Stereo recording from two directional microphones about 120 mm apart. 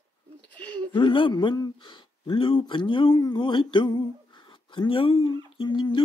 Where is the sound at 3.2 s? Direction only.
40° left (ahead or behind).